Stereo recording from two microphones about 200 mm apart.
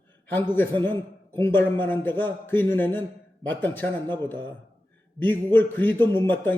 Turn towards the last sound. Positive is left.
turn(degrees=10)  # may be behind; listen again after turning